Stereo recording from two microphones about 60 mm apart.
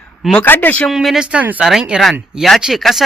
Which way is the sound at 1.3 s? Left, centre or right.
Right.